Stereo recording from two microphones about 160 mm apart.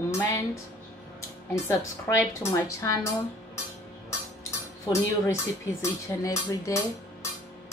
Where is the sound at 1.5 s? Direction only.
20° left (ahead or behind).